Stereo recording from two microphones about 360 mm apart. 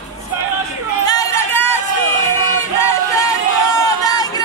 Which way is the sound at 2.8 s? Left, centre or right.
Centre.